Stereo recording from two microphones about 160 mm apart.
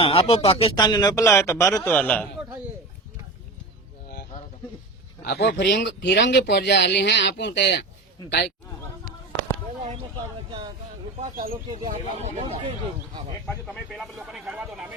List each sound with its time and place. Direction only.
0.0 s speech: 35° left (ahead or behind)
0.9 s a man's voice: 25° left (ahead or behind)
5.2 s speech: 75° left (ahead or behind)
9.8 s a sound: 40° right (ahead or behind)
11.2 s speech: 60° right (ahead or behind)
11.9 s speech: 45° right (ahead or behind)
13.9 s speech: centre (ahead or behind)